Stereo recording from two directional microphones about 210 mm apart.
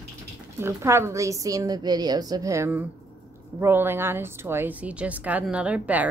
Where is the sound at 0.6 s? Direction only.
15° right (ahead or behind).